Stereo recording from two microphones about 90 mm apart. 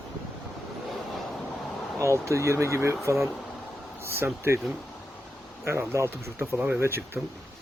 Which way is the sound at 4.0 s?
30° right (ahead or behind).